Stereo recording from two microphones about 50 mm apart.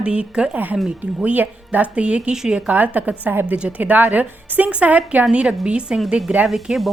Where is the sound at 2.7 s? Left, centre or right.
Right; by 6.0 s centre.